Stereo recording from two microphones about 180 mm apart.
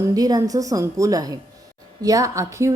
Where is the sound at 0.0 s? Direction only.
20° right (ahead or behind).